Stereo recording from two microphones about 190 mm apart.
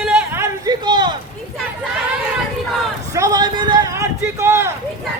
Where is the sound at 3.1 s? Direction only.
20° right (ahead or behind).